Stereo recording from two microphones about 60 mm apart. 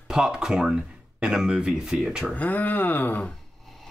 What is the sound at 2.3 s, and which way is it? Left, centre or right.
Speech, left.